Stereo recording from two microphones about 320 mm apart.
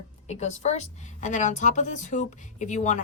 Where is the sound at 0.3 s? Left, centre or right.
Left.